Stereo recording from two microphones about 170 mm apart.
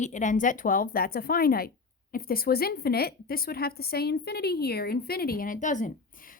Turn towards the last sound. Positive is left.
turn(degrees=45)  # may be behind; listen again after turning